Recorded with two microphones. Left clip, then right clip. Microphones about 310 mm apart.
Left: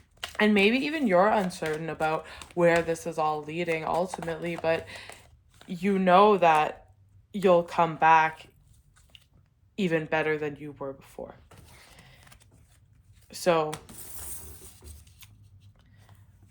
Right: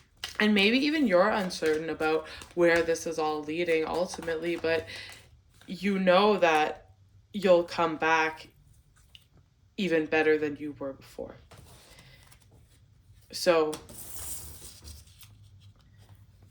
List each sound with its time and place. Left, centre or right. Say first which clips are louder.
0.2 s speech: left 2 dB; left
9.7 s speech: right 1 dB; left
11.9 s a sound: left 1 dB; left
13.3 s speech: even; left